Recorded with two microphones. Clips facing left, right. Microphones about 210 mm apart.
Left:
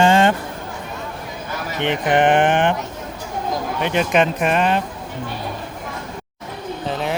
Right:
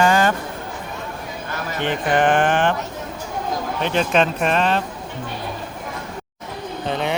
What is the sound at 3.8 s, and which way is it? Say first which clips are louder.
Speech: left 1 dB; 15° left (ahead or behind).